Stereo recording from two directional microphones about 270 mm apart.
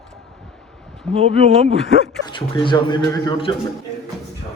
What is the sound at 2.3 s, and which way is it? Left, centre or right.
A man's voice, centre.